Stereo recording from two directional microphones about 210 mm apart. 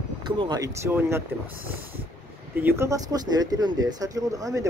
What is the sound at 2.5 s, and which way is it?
Speech, 10° right (ahead or behind).